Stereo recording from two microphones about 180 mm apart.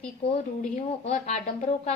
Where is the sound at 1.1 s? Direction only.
40° left (ahead or behind).